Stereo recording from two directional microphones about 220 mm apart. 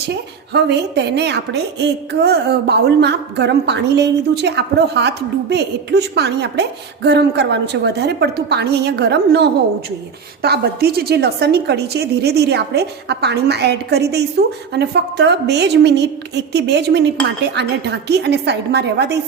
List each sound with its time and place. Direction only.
0.1 s a woman's voice: 50° right (ahead or behind)